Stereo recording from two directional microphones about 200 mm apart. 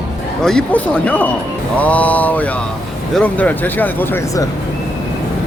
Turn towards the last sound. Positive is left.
turn(degrees=15)  # may be behind; listen again after turning